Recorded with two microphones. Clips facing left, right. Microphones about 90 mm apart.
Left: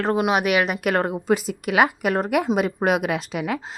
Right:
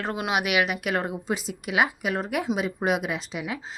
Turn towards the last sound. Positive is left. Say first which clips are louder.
# left 6 dB
turn(degrees=55)  # may be behind; listen again after turning